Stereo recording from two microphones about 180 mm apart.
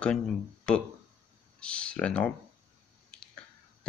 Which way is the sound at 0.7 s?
5° left (ahead or behind).